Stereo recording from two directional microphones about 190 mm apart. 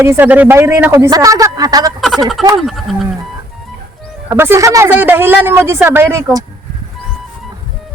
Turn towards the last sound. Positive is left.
turn(degrees=-15)  # may be behind; listen again after turning